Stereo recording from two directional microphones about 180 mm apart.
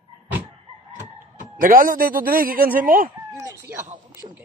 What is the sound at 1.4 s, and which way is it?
Speech, 50° right (ahead or behind).